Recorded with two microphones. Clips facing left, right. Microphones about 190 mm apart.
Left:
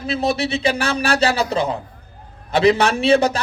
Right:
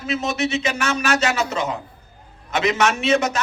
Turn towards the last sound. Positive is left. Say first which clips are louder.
# left 4 dB
turn(degrees=35)  # may be behind; listen again after turning